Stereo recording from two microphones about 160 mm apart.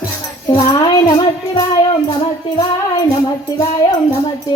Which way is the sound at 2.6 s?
25° left (ahead or behind).